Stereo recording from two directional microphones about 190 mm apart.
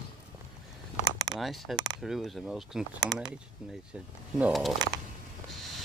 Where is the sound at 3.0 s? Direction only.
20° right (ahead or behind).